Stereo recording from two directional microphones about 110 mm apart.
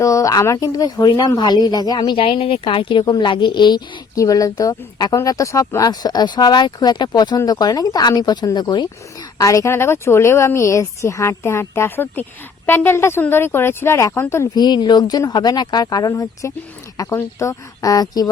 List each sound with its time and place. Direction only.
0.0 s speech: 30° left (ahead or behind)
2.1 s speech: 55° left (ahead or behind); by 8.9 s 40° left (ahead or behind)
9.4 s speech: 30° left (ahead or behind)
14.5 s speech: 40° left (ahead or behind)